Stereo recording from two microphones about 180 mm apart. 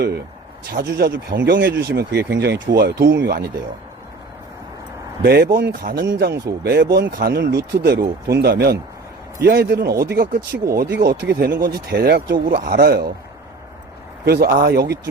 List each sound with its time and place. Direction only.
0.7 s speech: 60° right (ahead or behind)
5.2 s speech: 60° right (ahead or behind)
14.3 s speech: 60° right (ahead or behind)